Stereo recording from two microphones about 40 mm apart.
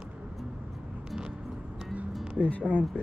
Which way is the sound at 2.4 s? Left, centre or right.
Left.